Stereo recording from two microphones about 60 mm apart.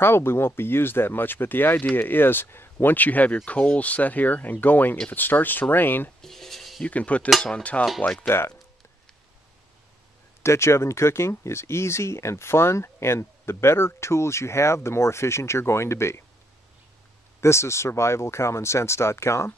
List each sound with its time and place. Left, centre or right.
0.0 s speech: left
6.2 s a sound: centre
6.8 s speech: left
7.2 s cutlery: centre
7.5 s speech: left
7.8 s speech: centre
10.4 s speech: left
17.4 s speech: left